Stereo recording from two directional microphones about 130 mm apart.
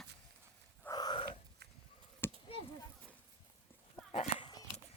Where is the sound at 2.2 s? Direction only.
15° left (ahead or behind).